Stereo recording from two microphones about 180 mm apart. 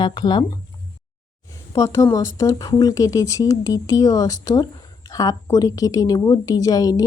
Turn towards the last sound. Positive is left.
turn(degrees=20)  # may be behind; listen again after turning